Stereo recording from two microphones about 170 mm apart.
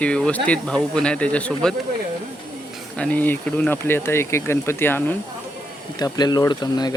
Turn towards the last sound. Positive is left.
turn(degrees=25)  # may be behind; listen again after turning